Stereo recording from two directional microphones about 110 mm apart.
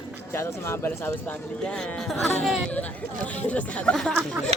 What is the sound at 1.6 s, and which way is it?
Speech, 5° left (ahead or behind).